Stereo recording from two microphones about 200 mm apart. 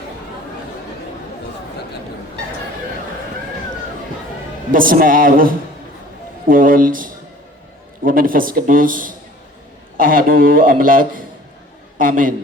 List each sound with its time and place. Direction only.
4.7 s a man's voice: 45° right (ahead or behind)